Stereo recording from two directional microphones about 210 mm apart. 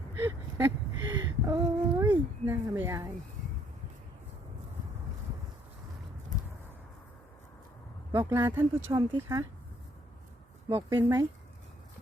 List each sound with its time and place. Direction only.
0.2 s a sound: 15° right (ahead or behind)
8.1 s speech: 10° right (ahead or behind)
10.8 s speech: 15° right (ahead or behind)